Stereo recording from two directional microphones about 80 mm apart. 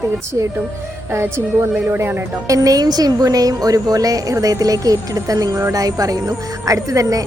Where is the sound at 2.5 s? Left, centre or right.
Right.